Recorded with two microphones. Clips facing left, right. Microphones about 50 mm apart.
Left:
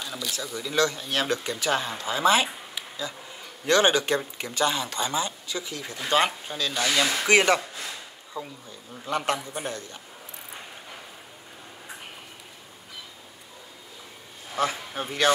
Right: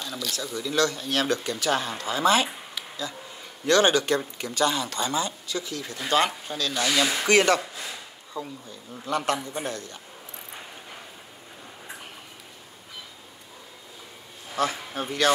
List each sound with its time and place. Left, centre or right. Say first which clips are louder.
0.0 s speech: right 1 dB; centre
6.7 s speech: even; centre
7.2 s speech: even; centre
9.0 s speech: right 1 dB; left
14.6 s speech: even; centre